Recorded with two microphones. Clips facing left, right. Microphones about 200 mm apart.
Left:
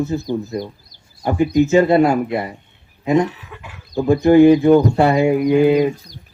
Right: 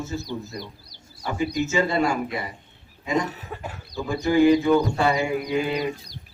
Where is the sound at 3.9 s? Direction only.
55° left (ahead or behind).